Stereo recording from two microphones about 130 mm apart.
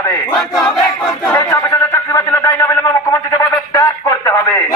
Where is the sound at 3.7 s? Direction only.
25° left (ahead or behind).